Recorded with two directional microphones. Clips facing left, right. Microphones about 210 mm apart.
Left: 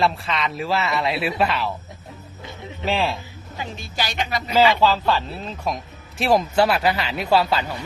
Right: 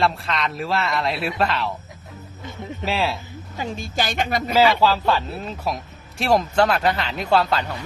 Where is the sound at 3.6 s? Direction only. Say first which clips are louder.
Right 3 dB; 45° right (ahead or behind).